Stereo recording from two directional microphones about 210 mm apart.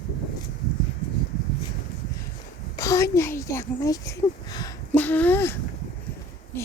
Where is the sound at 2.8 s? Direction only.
15° left (ahead or behind).